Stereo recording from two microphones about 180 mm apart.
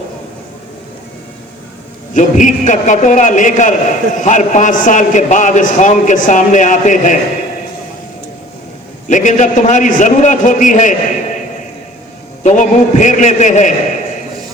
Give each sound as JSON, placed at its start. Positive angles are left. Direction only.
{"t": 2.1, "sound": "a man's voice", "side_deg": 45}
{"t": 9.0, "sound": "a man's voice", "side_deg": 45}
{"t": 12.4, "sound": "a man's voice", "side_deg": 40}